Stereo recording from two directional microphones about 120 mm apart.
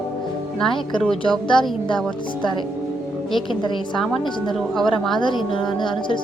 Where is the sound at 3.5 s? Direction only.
40° left (ahead or behind).